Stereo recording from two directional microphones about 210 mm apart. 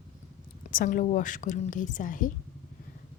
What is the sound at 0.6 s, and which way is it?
Speech, 40° left (ahead or behind).